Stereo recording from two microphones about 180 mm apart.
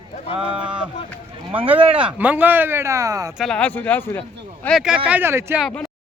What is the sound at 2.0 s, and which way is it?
Speech, 10° right (ahead or behind).